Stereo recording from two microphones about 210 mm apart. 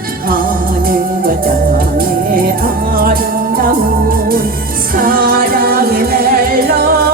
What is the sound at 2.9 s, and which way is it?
Music, 45° right (ahead or behind).